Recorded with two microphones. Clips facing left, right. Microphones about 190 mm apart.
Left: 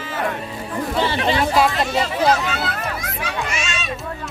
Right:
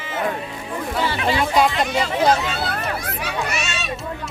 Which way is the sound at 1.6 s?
Centre (ahead or behind).